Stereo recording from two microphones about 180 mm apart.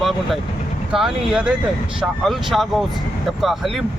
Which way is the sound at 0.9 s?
5° right (ahead or behind).